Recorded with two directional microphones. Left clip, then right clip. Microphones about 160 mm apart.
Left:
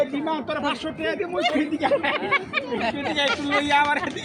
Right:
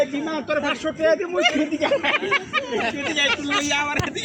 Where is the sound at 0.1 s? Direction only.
25° left (ahead or behind).